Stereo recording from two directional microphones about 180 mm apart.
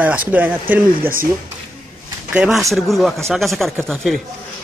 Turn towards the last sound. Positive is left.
turn(degrees=0)  # may be behind; listen again after turning